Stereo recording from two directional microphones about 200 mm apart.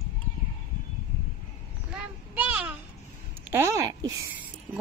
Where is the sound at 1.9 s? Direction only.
5° right (ahead or behind).